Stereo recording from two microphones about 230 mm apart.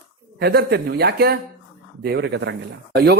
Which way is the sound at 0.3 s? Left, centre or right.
Right.